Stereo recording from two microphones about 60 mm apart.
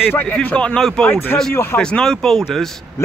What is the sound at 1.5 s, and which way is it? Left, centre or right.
Speech, left.